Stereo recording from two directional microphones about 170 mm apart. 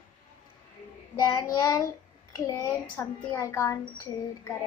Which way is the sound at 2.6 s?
10° left (ahead or behind).